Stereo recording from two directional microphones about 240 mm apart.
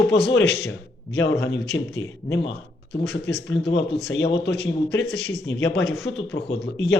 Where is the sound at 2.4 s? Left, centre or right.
Left.